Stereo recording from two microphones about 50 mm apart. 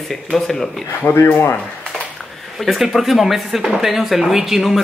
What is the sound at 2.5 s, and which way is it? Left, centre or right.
A woman's voice, centre.